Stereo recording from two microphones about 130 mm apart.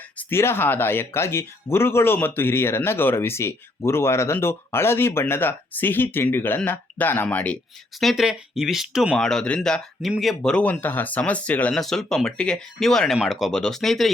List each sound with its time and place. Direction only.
0.2 s speech: 20° left (ahead or behind)
7.9 s speech: centre (ahead or behind)